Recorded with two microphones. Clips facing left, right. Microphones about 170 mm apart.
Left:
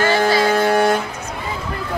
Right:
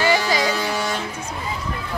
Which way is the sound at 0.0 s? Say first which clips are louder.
Left 4 dB; 50° left (ahead or behind).